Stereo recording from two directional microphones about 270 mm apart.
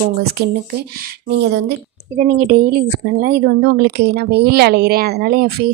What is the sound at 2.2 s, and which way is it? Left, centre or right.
A woman's voice, right.